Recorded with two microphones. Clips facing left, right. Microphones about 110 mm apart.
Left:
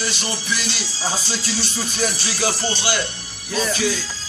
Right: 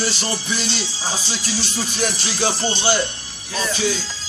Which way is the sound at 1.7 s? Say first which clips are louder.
Right 1 dB; 15° right (ahead or behind).